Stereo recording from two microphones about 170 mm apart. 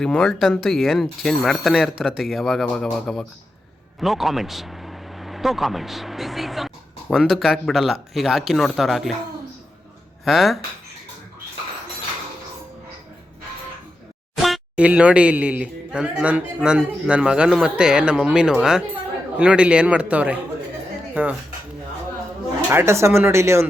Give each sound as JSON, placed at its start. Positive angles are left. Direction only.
{"t": 0.0, "sound": "speech", "side_deg": 5}
{"t": 10.2, "sound": "speech", "side_deg": 0}
{"t": 14.3, "sound": "a man's voice", "side_deg": 0}
{"t": 22.7, "sound": "a man's voice", "side_deg": -15}